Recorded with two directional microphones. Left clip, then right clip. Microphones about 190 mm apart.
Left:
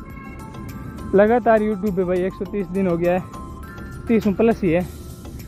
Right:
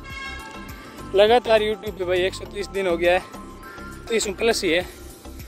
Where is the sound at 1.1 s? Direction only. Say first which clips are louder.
Left 1 dB; 20° right (ahead or behind).